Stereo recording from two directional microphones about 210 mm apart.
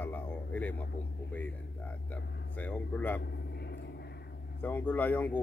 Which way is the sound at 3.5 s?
50° left (ahead or behind).